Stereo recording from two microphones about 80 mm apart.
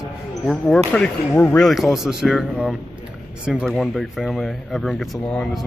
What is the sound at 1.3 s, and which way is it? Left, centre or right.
Speech, centre.